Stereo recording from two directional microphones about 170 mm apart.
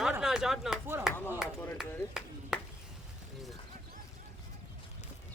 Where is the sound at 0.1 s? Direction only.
5° right (ahead or behind).